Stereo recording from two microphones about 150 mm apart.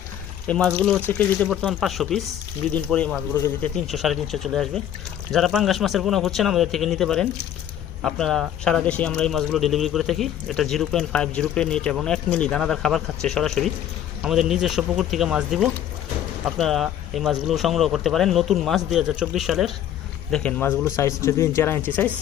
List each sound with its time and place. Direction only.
0.4 s speech: 5° left (ahead or behind)
1.6 s speech: centre (ahead or behind); by 3.7 s 15° left (ahead or behind)
3.9 s speech: centre (ahead or behind)